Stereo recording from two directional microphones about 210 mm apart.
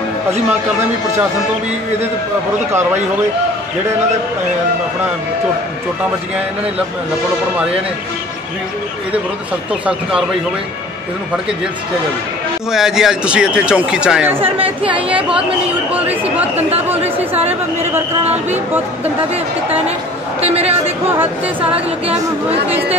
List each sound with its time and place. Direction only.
9.7 s speech: 5° right (ahead or behind)
12.7 s speech: centre (ahead or behind)
14.8 s speech: 25° right (ahead or behind)
15.0 s speech: 5° right (ahead or behind)
20.3 s speech: 30° right (ahead or behind)
21.1 s speech: 10° right (ahead or behind)